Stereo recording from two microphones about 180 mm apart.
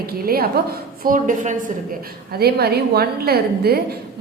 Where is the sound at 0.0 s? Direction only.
60° right (ahead or behind).